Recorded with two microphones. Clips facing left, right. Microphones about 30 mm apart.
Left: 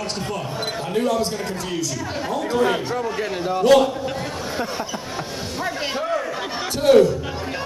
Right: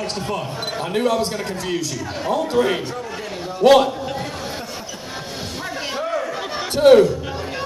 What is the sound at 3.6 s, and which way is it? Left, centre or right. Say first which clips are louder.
Speech: right 3 dB; right.